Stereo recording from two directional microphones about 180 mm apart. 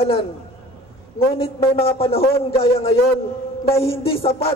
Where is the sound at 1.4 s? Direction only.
35° left (ahead or behind).